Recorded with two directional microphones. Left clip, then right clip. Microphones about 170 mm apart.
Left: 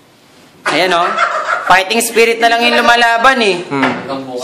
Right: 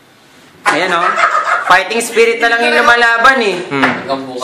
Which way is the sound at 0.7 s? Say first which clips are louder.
Left 2 dB; 55° left (ahead or behind).